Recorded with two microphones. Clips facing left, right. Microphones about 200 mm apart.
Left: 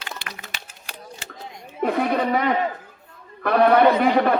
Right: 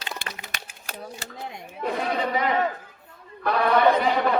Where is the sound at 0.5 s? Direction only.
50° right (ahead or behind).